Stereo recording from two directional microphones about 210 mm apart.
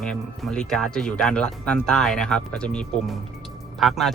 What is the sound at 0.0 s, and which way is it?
Speech, 5° left (ahead or behind).